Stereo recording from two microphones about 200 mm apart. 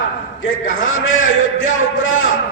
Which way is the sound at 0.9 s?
80° left.